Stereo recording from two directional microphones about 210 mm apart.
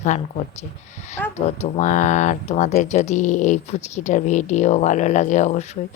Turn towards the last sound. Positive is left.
turn(degrees=35)  # may be behind; listen again after turning